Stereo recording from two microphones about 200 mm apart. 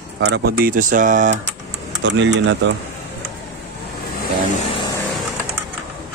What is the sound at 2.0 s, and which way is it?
Speech, 65° right (ahead or behind).